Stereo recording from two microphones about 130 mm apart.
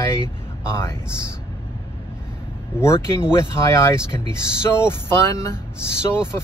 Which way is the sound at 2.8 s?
20° left (ahead or behind).